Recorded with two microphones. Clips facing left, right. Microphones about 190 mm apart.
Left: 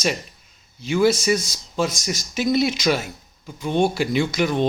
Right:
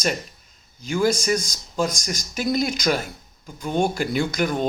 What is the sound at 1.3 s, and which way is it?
Speech, 5° left (ahead or behind).